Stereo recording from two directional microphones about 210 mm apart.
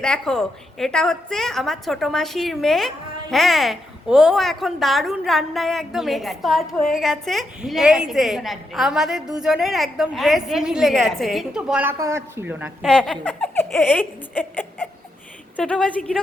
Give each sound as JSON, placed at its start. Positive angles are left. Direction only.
{"t": 0.0, "sound": "a woman's voice", "side_deg": 5}
{"t": 12.9, "sound": "a woman's voice", "side_deg": 5}